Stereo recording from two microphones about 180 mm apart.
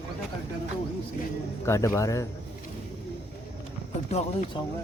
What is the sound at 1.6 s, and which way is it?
Speech, 15° left (ahead or behind).